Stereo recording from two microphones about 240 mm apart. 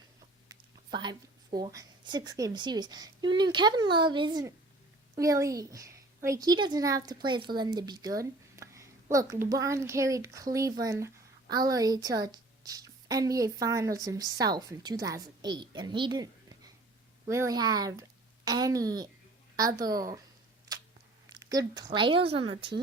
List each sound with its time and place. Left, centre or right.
0.4 s a woman's voice: centre
21.5 s a child's voice: centre